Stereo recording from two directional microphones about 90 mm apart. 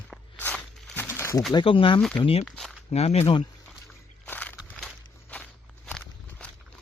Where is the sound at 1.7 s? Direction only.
80° left.